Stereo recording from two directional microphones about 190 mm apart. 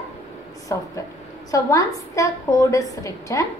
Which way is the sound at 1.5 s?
15° left (ahead or behind).